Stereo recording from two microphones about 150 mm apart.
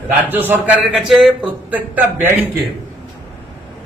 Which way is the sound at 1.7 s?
10° right (ahead or behind).